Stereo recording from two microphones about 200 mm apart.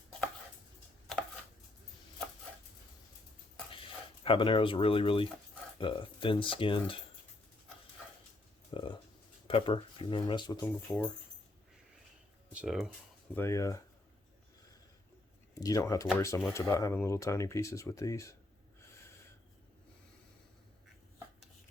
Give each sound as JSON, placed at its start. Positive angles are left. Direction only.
{"t": 4.2, "sound": "speech", "side_deg": 25}
{"t": 8.7, "sound": "a sound", "side_deg": 25}
{"t": 9.5, "sound": "speech", "side_deg": 25}
{"t": 10.9, "sound": "speech", "side_deg": 10}
{"t": 12.5, "sound": "speech", "side_deg": 0}
{"t": 13.3, "sound": "speech", "side_deg": 15}
{"t": 15.6, "sound": "speech", "side_deg": 15}